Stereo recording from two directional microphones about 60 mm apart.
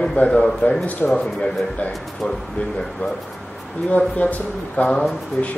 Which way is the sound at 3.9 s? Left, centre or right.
Left.